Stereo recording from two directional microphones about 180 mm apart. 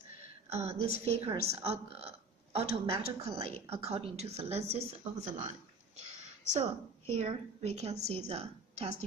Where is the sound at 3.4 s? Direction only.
35° right (ahead or behind).